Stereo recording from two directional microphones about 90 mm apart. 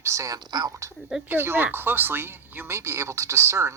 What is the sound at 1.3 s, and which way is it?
Speech, 20° right (ahead or behind).